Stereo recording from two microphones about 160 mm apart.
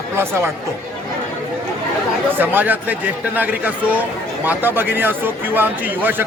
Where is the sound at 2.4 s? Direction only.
10° right (ahead or behind).